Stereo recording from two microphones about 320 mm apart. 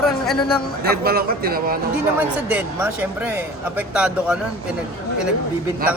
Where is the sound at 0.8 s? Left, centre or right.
Right.